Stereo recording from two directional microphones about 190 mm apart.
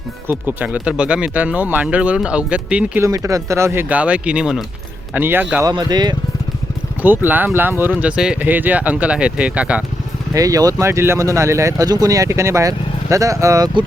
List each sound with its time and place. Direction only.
0.3 s speech: 10° right (ahead or behind)
5.6 s speech: 20° right (ahead or behind)
7.0 s speech: 10° right (ahead or behind)
10.3 s speech: 20° right (ahead or behind)